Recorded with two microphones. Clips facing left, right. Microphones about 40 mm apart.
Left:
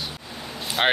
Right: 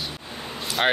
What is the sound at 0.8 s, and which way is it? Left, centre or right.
Speech, centre.